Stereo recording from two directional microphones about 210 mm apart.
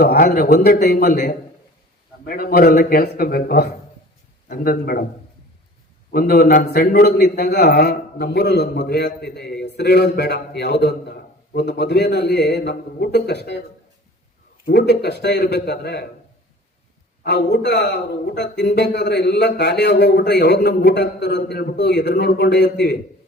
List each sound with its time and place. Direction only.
0.0 s a man's voice: 45° left (ahead or behind)
6.1 s a man's voice: 45° left (ahead or behind)
14.6 s a man's voice: 50° left (ahead or behind)
17.2 s a man's voice: 55° left (ahead or behind)